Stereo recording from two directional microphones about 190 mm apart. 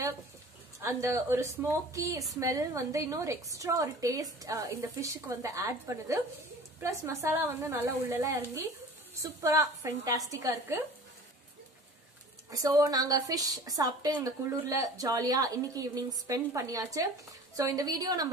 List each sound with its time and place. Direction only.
0.7 s a woman's voice: 15° right (ahead or behind)
12.4 s a woman's voice: 15° right (ahead or behind)